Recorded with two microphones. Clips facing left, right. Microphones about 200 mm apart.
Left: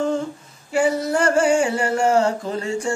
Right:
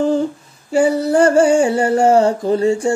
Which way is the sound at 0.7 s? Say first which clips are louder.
Right 5 dB; 30° right (ahead or behind).